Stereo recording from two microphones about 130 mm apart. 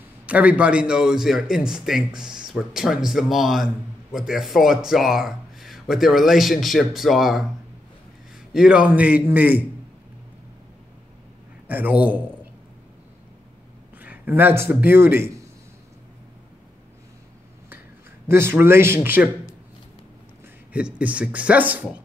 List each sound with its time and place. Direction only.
0.3 s a man's voice: 10° right (ahead or behind)
8.5 s a man's voice: 5° right (ahead or behind)
11.6 s a man's voice: 15° right (ahead or behind)
13.9 s a man's voice: 10° right (ahead or behind)
18.3 s speech: 20° right (ahead or behind)
20.7 s a man's voice: 10° right (ahead or behind)